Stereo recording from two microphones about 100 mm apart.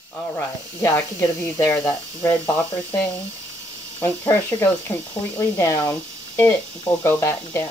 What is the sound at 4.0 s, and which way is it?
Speech, 20° left (ahead or behind).